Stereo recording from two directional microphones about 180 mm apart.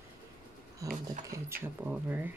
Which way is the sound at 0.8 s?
15° right (ahead or behind).